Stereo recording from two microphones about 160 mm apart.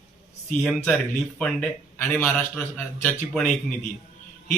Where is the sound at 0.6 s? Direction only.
5° left (ahead or behind).